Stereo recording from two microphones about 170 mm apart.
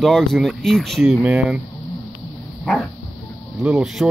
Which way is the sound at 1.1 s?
10° right (ahead or behind).